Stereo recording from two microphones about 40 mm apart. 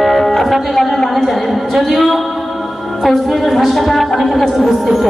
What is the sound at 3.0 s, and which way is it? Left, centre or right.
Music, centre.